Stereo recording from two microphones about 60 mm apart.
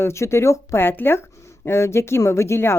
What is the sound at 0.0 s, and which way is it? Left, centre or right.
A woman's voice, left.